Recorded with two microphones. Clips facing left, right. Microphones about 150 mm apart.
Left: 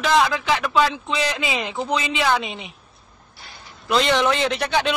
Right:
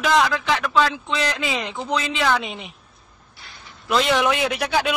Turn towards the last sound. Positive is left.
turn(degrees=-5)  # may be behind; listen again after turning